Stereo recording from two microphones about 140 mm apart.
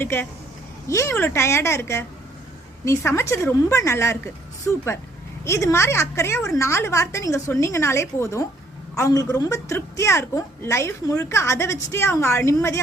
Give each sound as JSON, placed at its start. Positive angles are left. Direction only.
{"t": 0.0, "sound": "a woman's voice", "side_deg": 15}